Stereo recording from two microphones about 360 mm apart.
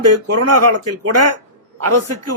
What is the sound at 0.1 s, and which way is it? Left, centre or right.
A man's voice, right.